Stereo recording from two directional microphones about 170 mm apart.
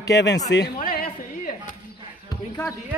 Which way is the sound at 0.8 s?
60° left (ahead or behind).